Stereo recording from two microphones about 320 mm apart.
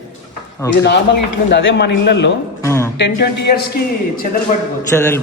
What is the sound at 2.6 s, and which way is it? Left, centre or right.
Speech, centre.